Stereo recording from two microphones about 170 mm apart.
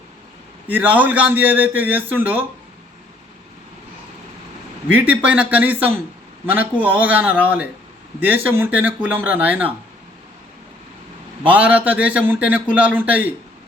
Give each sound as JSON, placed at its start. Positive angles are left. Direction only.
{"t": 0.7, "sound": "a man's voice", "side_deg": -10}
{"t": 4.9, "sound": "a man's voice", "side_deg": -10}
{"t": 11.4, "sound": "a man's voice", "side_deg": -10}